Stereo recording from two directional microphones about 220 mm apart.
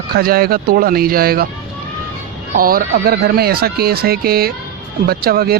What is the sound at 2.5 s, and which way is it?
Speech, 40° right (ahead or behind).